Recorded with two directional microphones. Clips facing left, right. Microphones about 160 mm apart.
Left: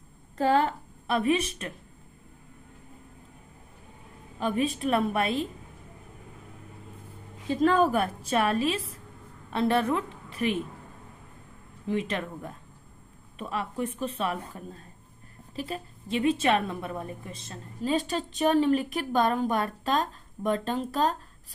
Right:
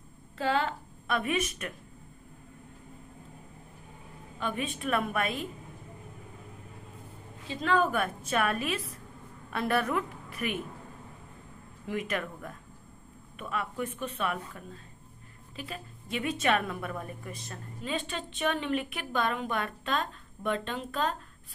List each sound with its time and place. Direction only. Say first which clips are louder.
0.3 s a woman's voice: left 5 dB; 40° left (ahead or behind)
4.4 s a woman's voice: left 6 dB; 35° left (ahead or behind)
7.5 s a woman's voice: left 5 dB; 40° left (ahead or behind)
11.9 s a woman's voice: left 3 dB; 30° left (ahead or behind)
17.8 s a woman's voice: left 7 dB; 40° left (ahead or behind)